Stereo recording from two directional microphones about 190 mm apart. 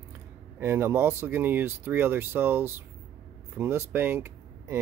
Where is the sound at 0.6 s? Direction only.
15° right (ahead or behind).